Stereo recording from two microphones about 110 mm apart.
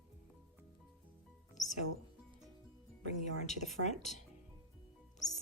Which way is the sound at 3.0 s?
90° left.